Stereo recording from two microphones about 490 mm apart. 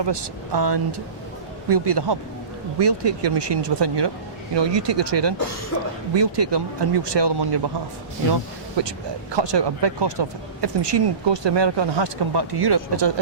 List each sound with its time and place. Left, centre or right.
0.0 s speech: right
8.8 s speech: right